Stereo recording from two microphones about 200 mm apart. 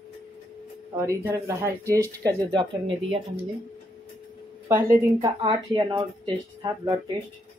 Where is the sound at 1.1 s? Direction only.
15° right (ahead or behind).